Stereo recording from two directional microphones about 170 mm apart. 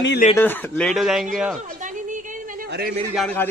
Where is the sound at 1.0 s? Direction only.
Centre (ahead or behind).